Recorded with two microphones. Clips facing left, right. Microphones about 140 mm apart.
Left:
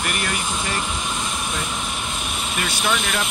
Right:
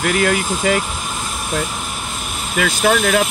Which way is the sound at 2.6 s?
90° right.